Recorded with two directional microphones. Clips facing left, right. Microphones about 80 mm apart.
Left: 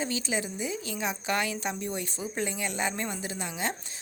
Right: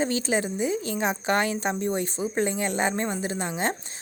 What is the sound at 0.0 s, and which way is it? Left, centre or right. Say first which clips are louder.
Speech: right 6 dB; right.